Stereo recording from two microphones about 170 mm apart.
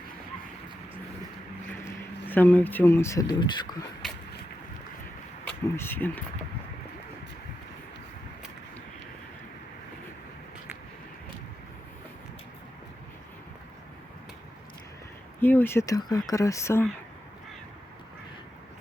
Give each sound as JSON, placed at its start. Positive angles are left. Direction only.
{"t": 2.2, "sound": "speech", "side_deg": 10}
{"t": 4.0, "sound": "a sound", "side_deg": 0}
{"t": 5.5, "sound": "speech", "side_deg": 10}
{"t": 15.4, "sound": "speech", "side_deg": 15}